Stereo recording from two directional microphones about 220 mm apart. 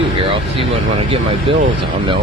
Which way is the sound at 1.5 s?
25° right (ahead or behind).